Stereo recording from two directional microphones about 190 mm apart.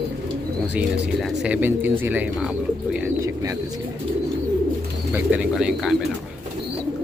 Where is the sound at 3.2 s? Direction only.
15° right (ahead or behind).